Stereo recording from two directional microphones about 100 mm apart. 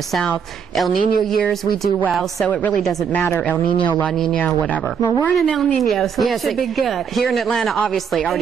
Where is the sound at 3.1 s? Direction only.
25° left (ahead or behind).